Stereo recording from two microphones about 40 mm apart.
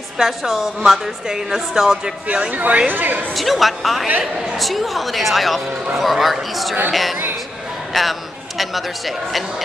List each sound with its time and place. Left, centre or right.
0.2 s a woman's voice: centre
2.5 s a woman's voice: right
3.3 s a man's voice: centre